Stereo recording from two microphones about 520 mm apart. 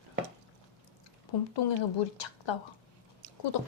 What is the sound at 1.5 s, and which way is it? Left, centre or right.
Speech, left.